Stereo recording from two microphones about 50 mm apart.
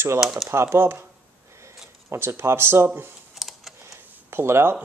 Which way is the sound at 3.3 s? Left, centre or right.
Centre.